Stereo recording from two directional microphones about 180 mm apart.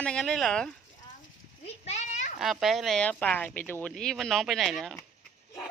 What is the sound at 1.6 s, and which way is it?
Children playing, 35° left (ahead or behind).